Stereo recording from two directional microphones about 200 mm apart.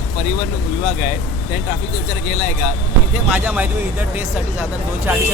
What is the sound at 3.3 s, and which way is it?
Speech, 10° right (ahead or behind).